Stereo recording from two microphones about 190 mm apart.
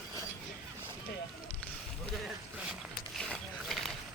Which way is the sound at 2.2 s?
5° right (ahead or behind).